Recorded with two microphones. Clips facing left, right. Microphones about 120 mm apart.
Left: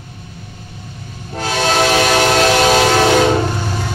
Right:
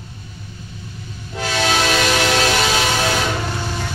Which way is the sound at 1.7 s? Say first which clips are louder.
Left 6 dB; 45° left (ahead or behind).